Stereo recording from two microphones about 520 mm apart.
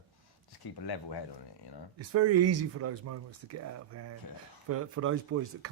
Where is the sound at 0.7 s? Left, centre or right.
Left.